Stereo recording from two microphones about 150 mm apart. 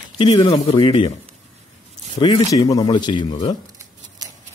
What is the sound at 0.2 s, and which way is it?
Speech, 35° left (ahead or behind).